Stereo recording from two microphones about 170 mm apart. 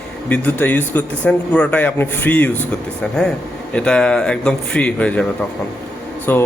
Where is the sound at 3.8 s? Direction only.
5° left (ahead or behind).